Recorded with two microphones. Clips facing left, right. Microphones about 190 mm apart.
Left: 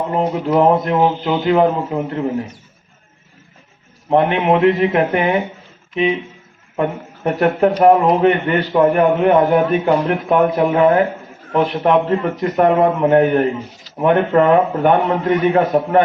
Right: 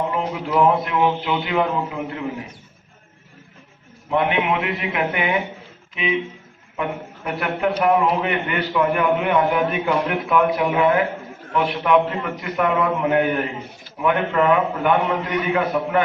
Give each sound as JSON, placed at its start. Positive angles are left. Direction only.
{"t": 0.1, "sound": "a man's voice", "side_deg": 40}
{"t": 4.1, "sound": "a man's voice", "side_deg": 40}
{"t": 7.3, "sound": "a man's voice", "side_deg": 40}